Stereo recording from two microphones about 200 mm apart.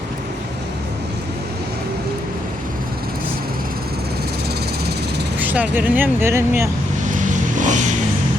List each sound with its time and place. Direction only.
5.4 s speech: 10° right (ahead or behind)
7.0 s vehicle: 40° right (ahead or behind)